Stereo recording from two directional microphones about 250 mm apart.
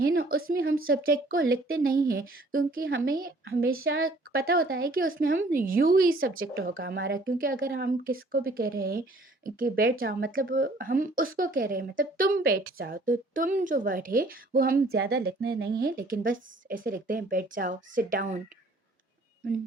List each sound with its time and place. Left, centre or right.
0.9 s a woman's voice: right